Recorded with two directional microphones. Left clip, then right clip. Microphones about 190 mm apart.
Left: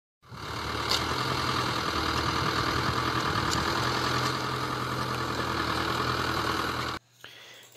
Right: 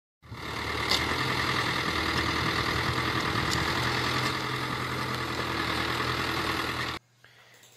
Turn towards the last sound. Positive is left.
turn(degrees=45)  # may be behind; listen again after turning